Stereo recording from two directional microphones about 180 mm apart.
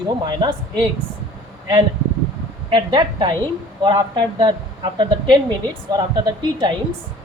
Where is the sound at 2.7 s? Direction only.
25° right (ahead or behind).